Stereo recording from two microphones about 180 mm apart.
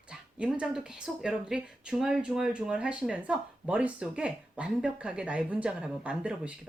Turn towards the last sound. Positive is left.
turn(degrees=-5)  # may be behind; listen again after turning